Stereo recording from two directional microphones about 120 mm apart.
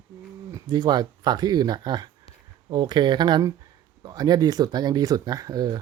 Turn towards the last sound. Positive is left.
turn(degrees=-35)  # may be behind; listen again after turning